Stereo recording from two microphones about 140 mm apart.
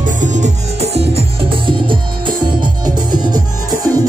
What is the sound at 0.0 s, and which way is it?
Music, 60° right (ahead or behind).